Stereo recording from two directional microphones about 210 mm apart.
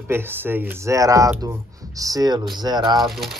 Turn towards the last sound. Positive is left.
turn(degrees=0)  # may be behind; listen again after turning